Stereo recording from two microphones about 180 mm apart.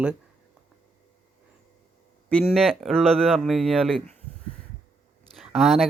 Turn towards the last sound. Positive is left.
turn(degrees=0)  # may be behind; listen again after turning